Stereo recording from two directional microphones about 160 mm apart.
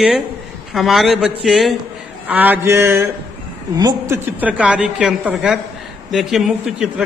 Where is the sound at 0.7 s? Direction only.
Centre (ahead or behind).